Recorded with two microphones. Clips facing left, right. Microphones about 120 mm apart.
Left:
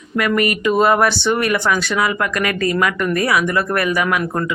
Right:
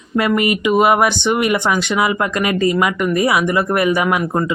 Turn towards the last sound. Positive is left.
turn(degrees=-20)  # may be behind; listen again after turning